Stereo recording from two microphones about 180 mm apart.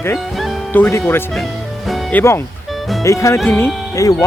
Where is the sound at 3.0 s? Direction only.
15° left (ahead or behind).